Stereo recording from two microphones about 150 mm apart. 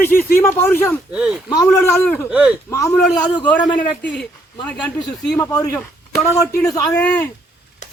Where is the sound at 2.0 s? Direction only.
10° left (ahead or behind).